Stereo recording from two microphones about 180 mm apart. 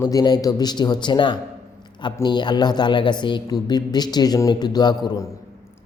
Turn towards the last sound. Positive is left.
turn(degrees=15)  # may be behind; listen again after turning